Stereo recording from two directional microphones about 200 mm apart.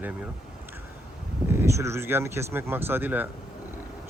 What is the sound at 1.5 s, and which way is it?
Speech, 15° right (ahead or behind).